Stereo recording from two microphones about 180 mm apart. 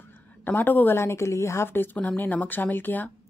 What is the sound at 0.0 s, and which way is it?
A woman's voice, 10° left (ahead or behind).